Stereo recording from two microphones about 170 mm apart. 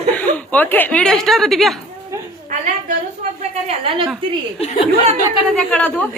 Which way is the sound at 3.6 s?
35° right (ahead or behind).